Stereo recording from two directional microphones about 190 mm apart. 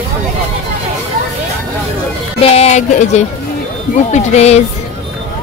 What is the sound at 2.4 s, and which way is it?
Speech, 35° left (ahead or behind).